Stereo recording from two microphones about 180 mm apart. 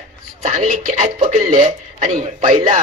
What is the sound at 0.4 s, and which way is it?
A man's voice, 45° right (ahead or behind).